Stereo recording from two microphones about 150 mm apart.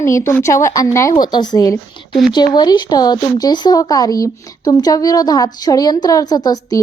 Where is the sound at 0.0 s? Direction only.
20° left (ahead or behind).